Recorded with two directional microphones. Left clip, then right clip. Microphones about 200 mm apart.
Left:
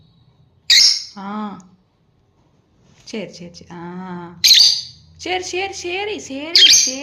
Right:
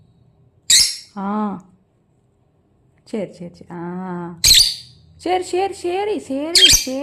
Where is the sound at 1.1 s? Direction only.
20° right (ahead or behind).